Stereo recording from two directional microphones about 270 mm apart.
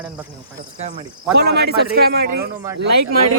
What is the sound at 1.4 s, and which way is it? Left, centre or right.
Speech, right.